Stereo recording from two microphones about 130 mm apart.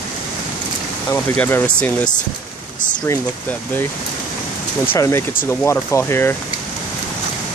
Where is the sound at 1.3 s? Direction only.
10° left (ahead or behind).